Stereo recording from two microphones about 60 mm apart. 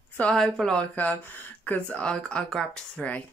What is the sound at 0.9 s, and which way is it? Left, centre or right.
Speech, left.